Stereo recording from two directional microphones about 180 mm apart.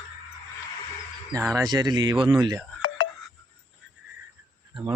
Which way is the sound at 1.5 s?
20° right (ahead or behind).